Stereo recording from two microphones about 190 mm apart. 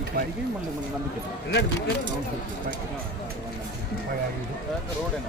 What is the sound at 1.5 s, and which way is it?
Speech, 65° left (ahead or behind).